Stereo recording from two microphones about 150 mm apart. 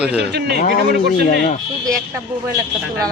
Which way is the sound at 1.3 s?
55° left (ahead or behind).